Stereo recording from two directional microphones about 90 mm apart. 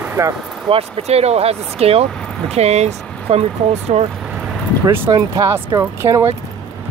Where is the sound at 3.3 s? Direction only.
90° right.